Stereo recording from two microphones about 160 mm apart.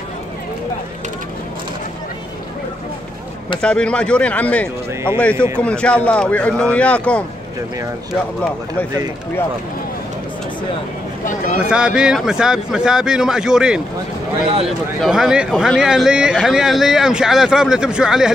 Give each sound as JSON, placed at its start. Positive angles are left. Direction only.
{"t": 3.6, "sound": "speech", "side_deg": 5}
{"t": 11.2, "sound": "a sound", "side_deg": 55}
{"t": 11.7, "sound": "a man's voice", "side_deg": -5}
{"t": 15.0, "sound": "a man's voice", "side_deg": -5}